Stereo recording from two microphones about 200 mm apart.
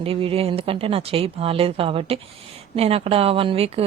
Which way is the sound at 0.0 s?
30° right (ahead or behind).